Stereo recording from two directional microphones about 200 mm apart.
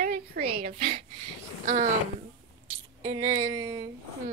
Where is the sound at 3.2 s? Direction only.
35° right (ahead or behind).